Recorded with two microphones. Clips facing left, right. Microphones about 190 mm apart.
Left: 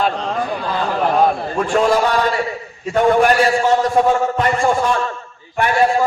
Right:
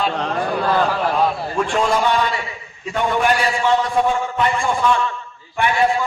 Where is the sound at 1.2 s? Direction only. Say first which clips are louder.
Left 3 dB; 50° left (ahead or behind).